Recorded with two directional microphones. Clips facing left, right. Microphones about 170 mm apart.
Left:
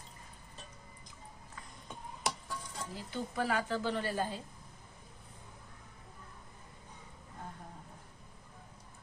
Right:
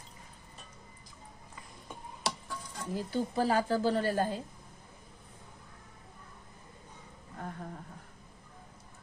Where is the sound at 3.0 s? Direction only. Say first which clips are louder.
Right 6 dB; 35° right (ahead or behind).